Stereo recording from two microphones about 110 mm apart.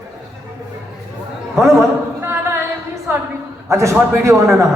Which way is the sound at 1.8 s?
25° right (ahead or behind).